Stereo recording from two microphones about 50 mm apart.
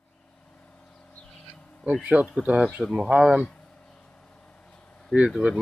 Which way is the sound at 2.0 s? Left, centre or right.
Right.